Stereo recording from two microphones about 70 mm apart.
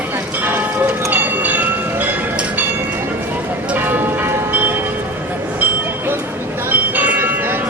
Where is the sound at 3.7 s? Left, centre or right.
Right.